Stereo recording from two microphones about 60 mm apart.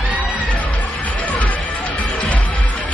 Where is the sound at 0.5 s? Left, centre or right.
Left.